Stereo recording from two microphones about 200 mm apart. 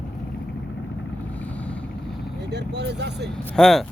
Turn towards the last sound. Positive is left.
turn(degrees=0)  # may be behind; listen again after turning